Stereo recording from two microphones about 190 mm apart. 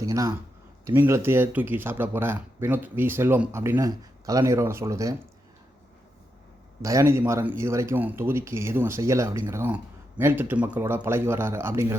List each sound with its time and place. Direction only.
0.0 s speech: 15° right (ahead or behind)
6.8 s speech: 15° right (ahead or behind)